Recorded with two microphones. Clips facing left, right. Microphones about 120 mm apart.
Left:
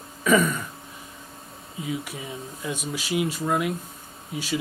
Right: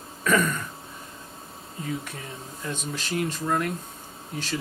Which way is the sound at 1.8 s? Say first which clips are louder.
Left 2 dB; 10° left (ahead or behind).